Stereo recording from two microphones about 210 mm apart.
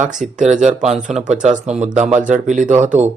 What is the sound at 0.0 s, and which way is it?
Speech, 35° right (ahead or behind).